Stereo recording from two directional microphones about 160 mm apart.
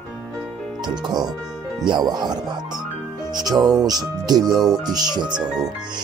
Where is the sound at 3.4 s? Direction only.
25° right (ahead or behind).